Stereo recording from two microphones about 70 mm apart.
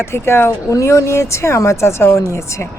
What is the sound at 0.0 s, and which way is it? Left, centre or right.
A woman's voice, left.